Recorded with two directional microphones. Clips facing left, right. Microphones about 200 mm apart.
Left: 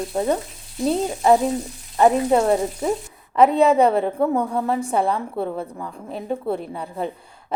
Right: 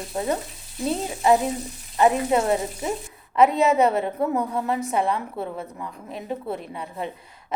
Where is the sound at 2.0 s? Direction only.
35° left (ahead or behind).